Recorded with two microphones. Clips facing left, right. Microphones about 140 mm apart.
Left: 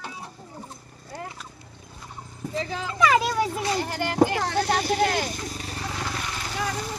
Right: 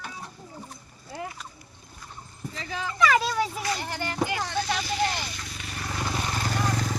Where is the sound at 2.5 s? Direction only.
30° left (ahead or behind).